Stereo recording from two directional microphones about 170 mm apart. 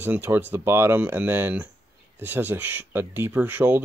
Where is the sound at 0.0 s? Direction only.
10° right (ahead or behind).